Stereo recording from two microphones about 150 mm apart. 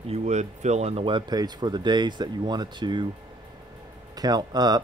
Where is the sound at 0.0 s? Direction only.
45° right (ahead or behind); by 3.1 s 30° right (ahead or behind).